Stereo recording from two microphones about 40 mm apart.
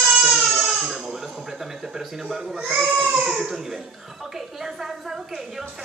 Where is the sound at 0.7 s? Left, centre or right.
Centre.